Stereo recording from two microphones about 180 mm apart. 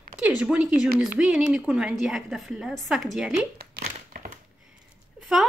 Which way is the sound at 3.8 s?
50° right (ahead or behind).